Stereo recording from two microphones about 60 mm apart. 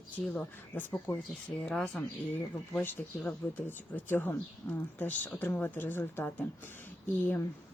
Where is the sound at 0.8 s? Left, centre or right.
Left.